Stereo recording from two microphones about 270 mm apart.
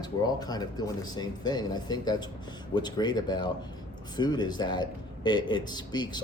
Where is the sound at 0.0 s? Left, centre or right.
Centre.